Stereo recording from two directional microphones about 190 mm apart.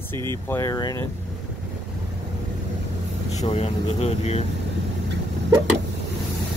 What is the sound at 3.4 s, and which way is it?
Speech, 35° left (ahead or behind).